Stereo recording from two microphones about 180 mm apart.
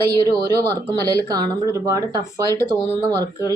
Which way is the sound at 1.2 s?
20° right (ahead or behind).